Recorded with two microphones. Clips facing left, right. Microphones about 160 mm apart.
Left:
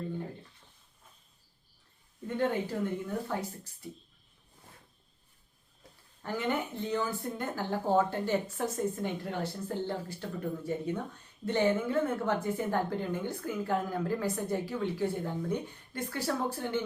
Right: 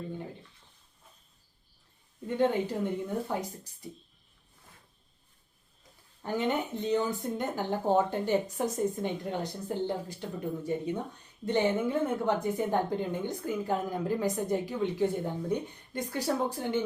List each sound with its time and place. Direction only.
2.4 s a woman's voice: 15° right (ahead or behind)
6.2 s a woman's voice: 20° right (ahead or behind)